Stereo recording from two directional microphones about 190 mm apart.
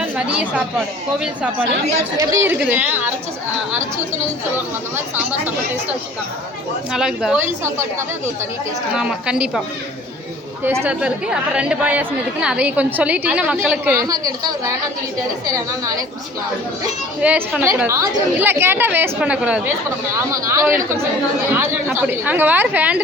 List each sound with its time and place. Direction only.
0.0 s a woman's voice: 5° right (ahead or behind)
4.5 s a woman's voice: 10° right (ahead or behind)
6.9 s a woman's voice: 5° right (ahead or behind)
7.6 s a woman's voice: 15° right (ahead or behind)
10.8 s a woman's voice: 5° right (ahead or behind)
17.2 s a woman's voice: 5° right (ahead or behind)
21.9 s a woman's voice: 10° right (ahead or behind)